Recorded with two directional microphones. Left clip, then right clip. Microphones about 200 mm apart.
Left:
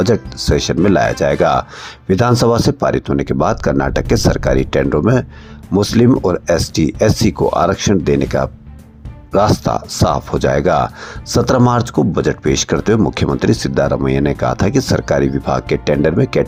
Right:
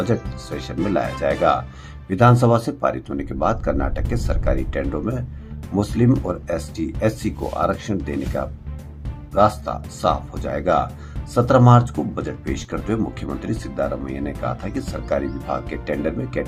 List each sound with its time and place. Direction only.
0.0 s speech: 35° left (ahead or behind)